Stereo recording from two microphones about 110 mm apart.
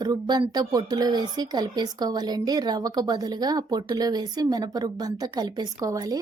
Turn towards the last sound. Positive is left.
turn(degrees=-35)  # may be behind; listen again after turning